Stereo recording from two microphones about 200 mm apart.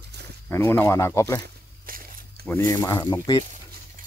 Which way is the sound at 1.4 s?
50° right (ahead or behind).